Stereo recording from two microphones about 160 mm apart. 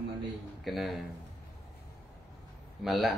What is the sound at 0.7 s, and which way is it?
Speech, centre (ahead or behind).